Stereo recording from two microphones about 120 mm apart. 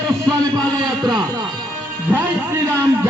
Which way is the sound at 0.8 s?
35° right (ahead or behind).